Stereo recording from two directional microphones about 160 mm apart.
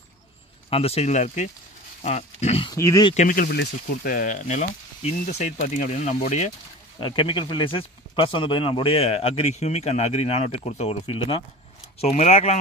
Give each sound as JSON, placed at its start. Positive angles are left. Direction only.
{"t": 0.7, "sound": "speech", "side_deg": 35}
{"t": 2.7, "sound": "speech", "side_deg": 20}
{"t": 3.2, "sound": "speech", "side_deg": 60}
{"t": 7.0, "sound": "speech", "side_deg": 30}